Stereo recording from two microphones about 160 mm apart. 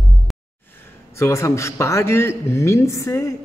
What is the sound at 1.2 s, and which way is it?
Speech, 20° left (ahead or behind).